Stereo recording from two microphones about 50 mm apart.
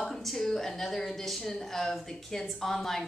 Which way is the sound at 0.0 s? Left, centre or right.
Centre.